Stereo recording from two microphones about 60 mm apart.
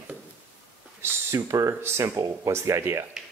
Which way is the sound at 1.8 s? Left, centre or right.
Right.